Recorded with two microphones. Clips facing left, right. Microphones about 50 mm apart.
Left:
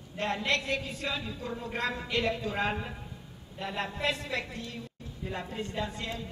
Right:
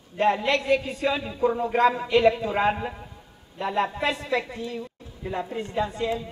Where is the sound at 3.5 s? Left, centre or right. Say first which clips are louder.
Right 9 dB; centre.